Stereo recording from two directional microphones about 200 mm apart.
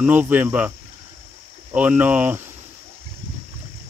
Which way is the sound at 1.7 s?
10° right (ahead or behind).